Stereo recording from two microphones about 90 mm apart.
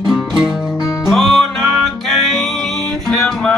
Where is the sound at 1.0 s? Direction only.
Centre (ahead or behind).